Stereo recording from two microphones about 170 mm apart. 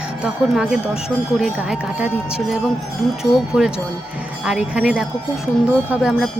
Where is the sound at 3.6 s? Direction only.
Centre (ahead or behind).